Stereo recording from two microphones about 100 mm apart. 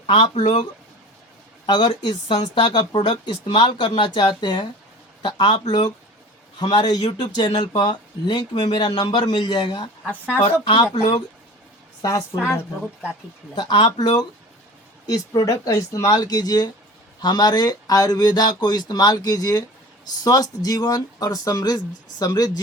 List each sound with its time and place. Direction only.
0.1 s speech: 50° left (ahead or behind)
1.6 s speech: 45° left (ahead or behind)
10.1 s speech: 15° left (ahead or behind)
12.4 s speech: 30° left (ahead or behind)
13.6 s speech: 50° left (ahead or behind)